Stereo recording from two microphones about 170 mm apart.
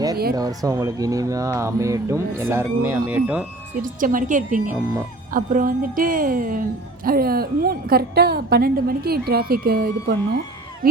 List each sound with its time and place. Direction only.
0.3 s speech: 20° right (ahead or behind)
3.8 s a woman's voice: 55° right (ahead or behind)